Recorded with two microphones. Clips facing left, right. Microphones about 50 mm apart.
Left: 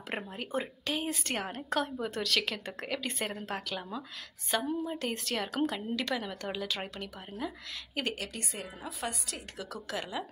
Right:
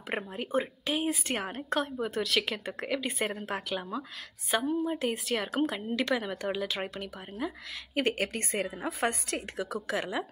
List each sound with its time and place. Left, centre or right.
0.1 s a woman's voice: centre
5.9 s a woman's voice: centre
8.0 s a woman's voice: right
9.6 s a woman's voice: right